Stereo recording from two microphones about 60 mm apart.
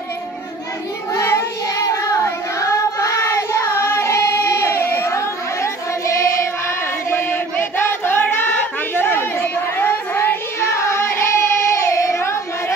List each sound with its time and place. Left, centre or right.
1.1 s child singing: left
7.1 s chant: left
7.5 s a sound: left
8.9 s child singing: left